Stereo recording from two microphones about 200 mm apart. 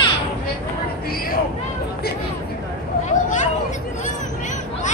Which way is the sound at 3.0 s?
35° left (ahead or behind).